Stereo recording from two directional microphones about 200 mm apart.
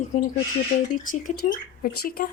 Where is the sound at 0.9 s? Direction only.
40° left (ahead or behind).